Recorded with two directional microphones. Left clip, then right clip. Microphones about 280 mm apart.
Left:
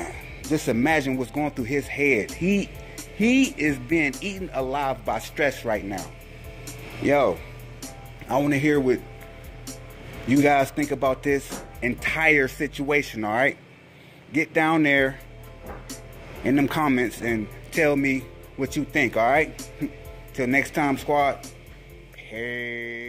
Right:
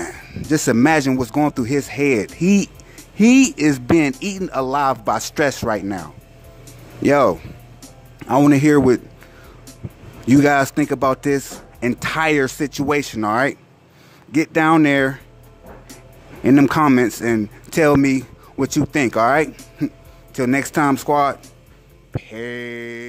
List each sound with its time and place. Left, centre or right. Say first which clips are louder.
0.5 s speech: right 7 dB; right
10.2 s speech: right 5 dB; right
16.4 s speech: right 8 dB; right
22.1 s a sound: right 3 dB; right